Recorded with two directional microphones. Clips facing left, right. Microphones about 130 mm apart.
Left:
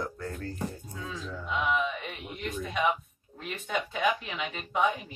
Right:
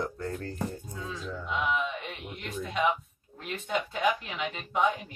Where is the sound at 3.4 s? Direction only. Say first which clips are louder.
Right 1 dB; centre (ahead or behind).